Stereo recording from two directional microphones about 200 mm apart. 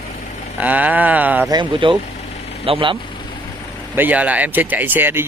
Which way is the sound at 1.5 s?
25° right (ahead or behind).